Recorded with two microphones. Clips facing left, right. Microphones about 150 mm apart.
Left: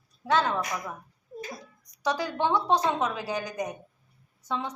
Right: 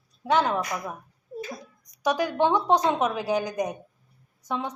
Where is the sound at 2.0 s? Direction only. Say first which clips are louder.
Right 4 dB; 15° right (ahead or behind).